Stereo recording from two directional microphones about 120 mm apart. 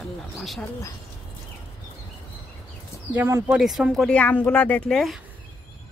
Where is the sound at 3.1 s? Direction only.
20° right (ahead or behind).